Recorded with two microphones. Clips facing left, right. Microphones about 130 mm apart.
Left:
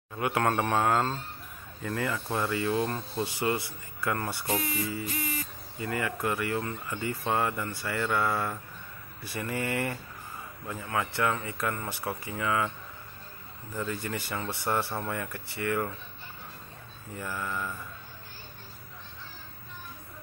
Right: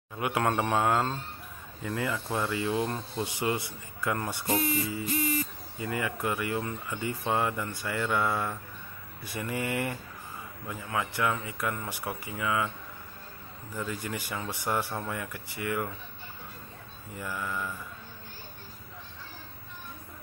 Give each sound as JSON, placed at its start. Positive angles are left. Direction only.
{"t": 0.2, "sound": "speech", "side_deg": -15}
{"t": 2.1, "sound": "speech", "side_deg": 0}
{"t": 2.5, "sound": "speech", "side_deg": -15}
{"t": 5.8, "sound": "speech", "side_deg": -15}
{"t": 13.7, "sound": "speech", "side_deg": -15}
{"t": 17.2, "sound": "speech", "side_deg": -5}